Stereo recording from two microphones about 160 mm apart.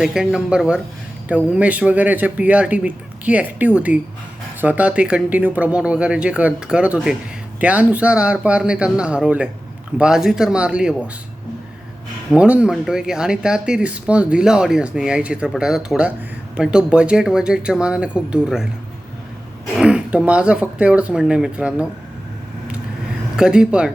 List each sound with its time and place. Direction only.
0.0 s speech: 5° right (ahead or behind)
12.3 s speech: 5° right (ahead or behind)
19.7 s speech: 5° right (ahead or behind)
23.4 s speech: 5° right (ahead or behind)